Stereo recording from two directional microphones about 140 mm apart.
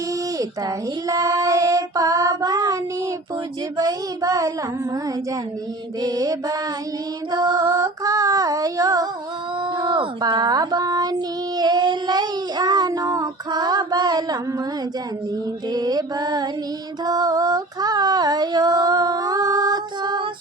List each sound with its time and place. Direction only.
1.0 s child singing: 25° right (ahead or behind)
3.8 s female singing: 25° right (ahead or behind)
6.0 s female singing: 25° right (ahead or behind)
9.7 s child singing: 30° right (ahead or behind)
15.7 s female singing: 30° right (ahead or behind)